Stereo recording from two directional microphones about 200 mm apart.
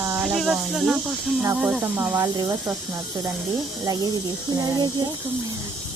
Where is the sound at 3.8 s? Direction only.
20° right (ahead or behind).